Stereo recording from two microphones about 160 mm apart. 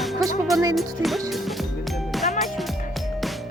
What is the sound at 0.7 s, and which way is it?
Speech, centre (ahead or behind).